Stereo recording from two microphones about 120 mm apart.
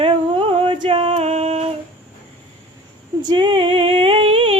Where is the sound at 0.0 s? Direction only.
50° right (ahead or behind).